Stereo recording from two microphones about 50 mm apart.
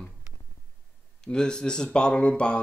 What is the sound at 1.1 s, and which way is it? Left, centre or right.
Speech, centre.